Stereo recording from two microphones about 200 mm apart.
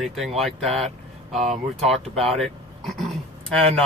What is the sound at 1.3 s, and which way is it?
Speech, 35° right (ahead or behind).